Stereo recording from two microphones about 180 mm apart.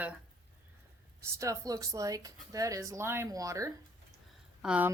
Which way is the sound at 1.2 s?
15° right (ahead or behind).